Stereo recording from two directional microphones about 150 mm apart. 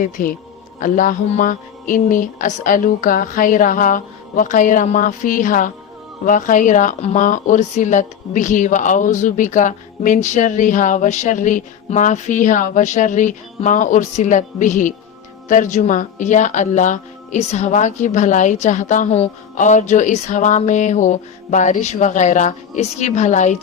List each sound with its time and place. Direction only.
0.0 s speech: 65° left (ahead or behind); by 23.6 s 50° left (ahead or behind)